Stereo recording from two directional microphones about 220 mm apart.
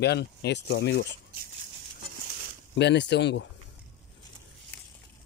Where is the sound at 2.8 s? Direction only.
50° left (ahead or behind).